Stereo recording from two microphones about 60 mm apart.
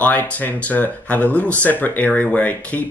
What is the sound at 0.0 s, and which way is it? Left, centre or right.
Speech, left.